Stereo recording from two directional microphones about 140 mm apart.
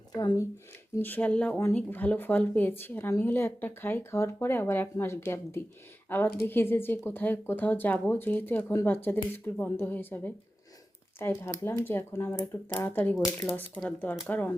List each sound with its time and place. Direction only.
0.1 s speech: 25° left (ahead or behind)
0.9 s speech: 15° left (ahead or behind)